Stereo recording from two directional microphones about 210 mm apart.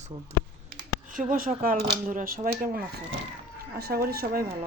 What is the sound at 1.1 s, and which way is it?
Speech, 40° right (ahead or behind).